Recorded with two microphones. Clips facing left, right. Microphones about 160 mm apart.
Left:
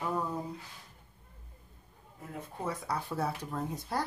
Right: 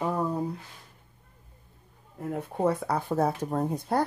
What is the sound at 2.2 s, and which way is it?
Speech, 65° right (ahead or behind).